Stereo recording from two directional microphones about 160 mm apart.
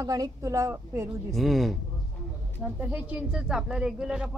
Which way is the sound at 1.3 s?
Centre (ahead or behind).